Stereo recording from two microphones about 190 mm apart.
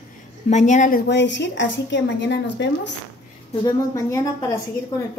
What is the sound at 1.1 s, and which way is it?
A woman's voice, 65° left (ahead or behind).